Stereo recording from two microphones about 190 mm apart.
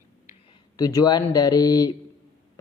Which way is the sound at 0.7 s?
20° left (ahead or behind).